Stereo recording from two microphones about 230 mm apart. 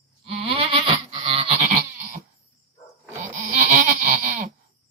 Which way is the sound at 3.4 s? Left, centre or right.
Right.